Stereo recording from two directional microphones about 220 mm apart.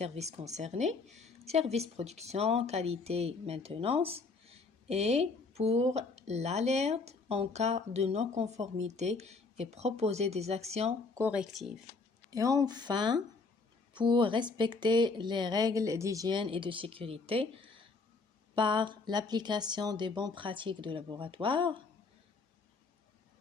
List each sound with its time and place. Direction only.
0.0 s a woman's voice: 30° right (ahead or behind)
11.1 s speech: 10° right (ahead or behind)
12.3 s a woman's voice: 15° right (ahead or behind)